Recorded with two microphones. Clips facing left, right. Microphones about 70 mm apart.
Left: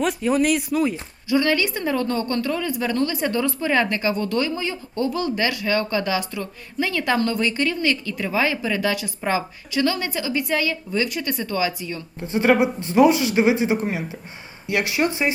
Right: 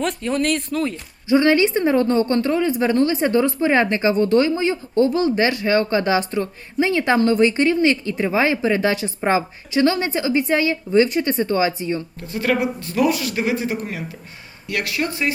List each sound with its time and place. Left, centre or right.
0.0 s speech: centre
1.3 s a woman's voice: right
12.2 s speech: left